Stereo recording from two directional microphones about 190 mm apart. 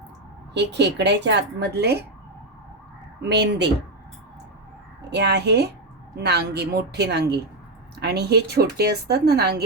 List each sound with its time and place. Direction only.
0.5 s speech: 65° right (ahead or behind)
3.2 s speech: 60° right (ahead or behind)
5.1 s speech: 60° right (ahead or behind)